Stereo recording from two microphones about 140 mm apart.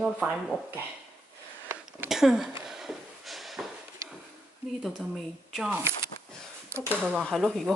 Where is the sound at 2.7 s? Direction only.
5° right (ahead or behind).